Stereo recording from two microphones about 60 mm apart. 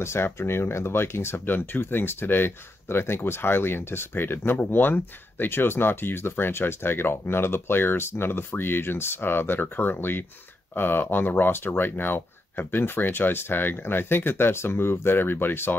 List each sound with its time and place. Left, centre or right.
0.0 s speech: left